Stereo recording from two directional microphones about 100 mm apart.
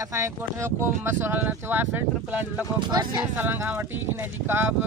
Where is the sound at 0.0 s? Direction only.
30° right (ahead or behind).